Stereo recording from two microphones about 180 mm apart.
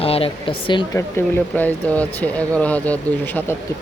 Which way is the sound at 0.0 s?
30° left (ahead or behind).